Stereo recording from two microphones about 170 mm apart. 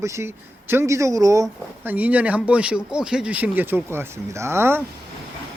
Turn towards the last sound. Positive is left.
turn(degrees=-15)  # may be behind; listen again after turning